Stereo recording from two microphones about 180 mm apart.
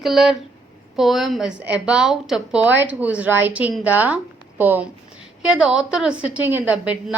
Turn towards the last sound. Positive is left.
turn(degrees=-5)  # may be behind; listen again after turning